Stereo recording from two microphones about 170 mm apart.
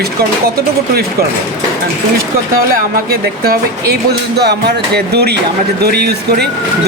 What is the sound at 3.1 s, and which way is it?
Speech, 65° right (ahead or behind).